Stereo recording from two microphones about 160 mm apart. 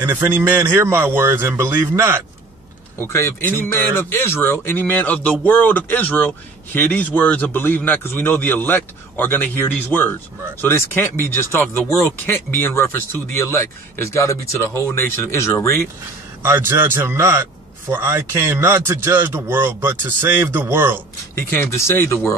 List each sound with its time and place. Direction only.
0.0 s a man's voice: 15° right (ahead or behind)
3.0 s speech: 15° left (ahead or behind)
16.4 s a man's voice: 15° right (ahead or behind)
21.4 s speech: 15° left (ahead or behind)